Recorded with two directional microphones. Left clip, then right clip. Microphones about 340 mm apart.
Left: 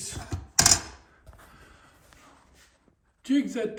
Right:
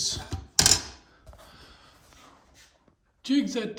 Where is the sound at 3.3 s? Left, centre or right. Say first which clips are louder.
Even; centre.